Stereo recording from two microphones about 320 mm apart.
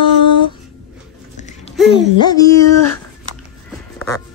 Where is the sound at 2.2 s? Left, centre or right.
Centre.